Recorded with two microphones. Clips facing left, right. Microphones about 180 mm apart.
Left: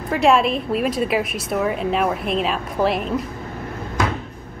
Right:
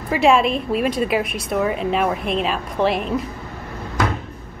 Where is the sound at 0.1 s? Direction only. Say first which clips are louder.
Right 1 dB; centre (ahead or behind).